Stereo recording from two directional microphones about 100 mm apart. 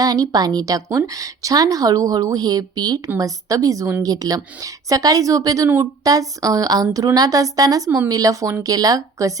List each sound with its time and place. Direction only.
0.0 s speech: 40° right (ahead or behind)
5.6 s speech: 25° right (ahead or behind)
6.1 s speech: 35° right (ahead or behind)